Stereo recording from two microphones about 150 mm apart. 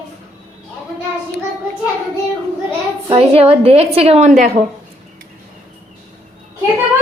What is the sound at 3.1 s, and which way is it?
A woman's voice, 40° right (ahead or behind).